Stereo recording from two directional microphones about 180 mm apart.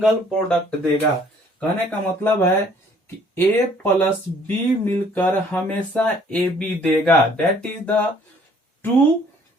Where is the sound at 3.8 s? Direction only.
10° left (ahead or behind).